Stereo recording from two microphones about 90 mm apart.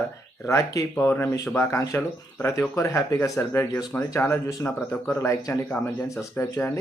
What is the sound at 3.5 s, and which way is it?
Speech, 25° left (ahead or behind).